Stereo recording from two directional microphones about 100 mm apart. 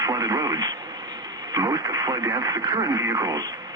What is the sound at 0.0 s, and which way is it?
Speech, 40° right (ahead or behind).